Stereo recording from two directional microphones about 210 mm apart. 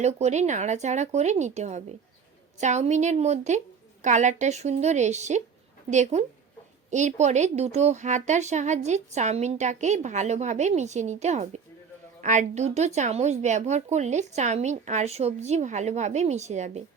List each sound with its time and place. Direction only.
0.0 s a woman's voice: 30° right (ahead or behind)